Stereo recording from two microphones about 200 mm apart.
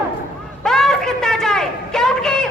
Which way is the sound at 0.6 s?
Centre (ahead or behind).